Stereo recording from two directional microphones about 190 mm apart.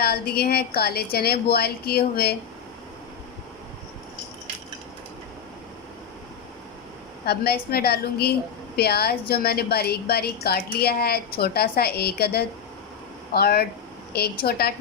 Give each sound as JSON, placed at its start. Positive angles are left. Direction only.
{"t": 0.0, "sound": "a woman's voice", "side_deg": 55}
{"t": 7.3, "sound": "a woman's voice", "side_deg": 55}